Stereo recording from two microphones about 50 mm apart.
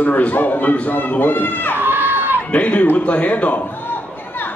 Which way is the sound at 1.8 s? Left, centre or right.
Right.